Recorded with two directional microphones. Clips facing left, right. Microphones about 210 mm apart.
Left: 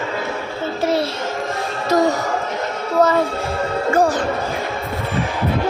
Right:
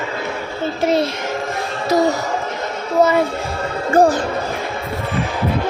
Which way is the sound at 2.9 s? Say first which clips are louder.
Right 1 dB; 10° right (ahead or behind).